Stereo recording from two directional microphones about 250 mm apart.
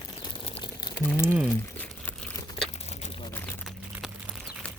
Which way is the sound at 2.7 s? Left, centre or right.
Left.